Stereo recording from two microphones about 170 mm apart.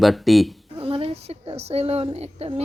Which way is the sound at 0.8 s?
35° right (ahead or behind).